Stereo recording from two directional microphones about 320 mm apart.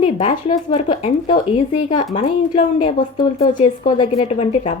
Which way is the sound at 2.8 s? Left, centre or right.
Centre.